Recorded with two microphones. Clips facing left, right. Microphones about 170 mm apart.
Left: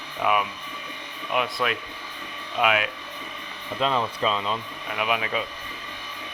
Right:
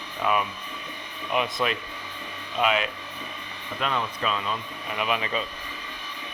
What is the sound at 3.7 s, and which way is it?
Speech, 30° left (ahead or behind).